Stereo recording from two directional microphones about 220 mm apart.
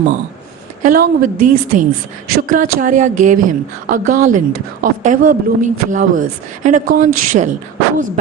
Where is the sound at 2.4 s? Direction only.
35° right (ahead or behind).